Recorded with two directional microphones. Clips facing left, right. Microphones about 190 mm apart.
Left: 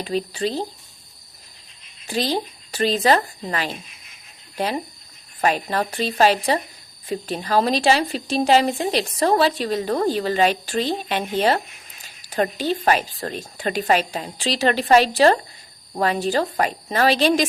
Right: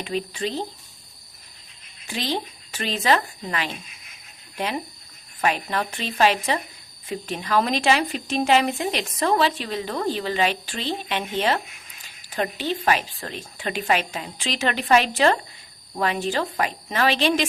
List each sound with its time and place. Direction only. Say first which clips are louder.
0.0 s speech: left 3 dB; 35° left (ahead or behind)
2.0 s speech: left 4 dB; 40° left (ahead or behind)